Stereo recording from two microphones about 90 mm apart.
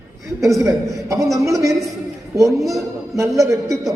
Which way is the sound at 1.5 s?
35° right (ahead or behind).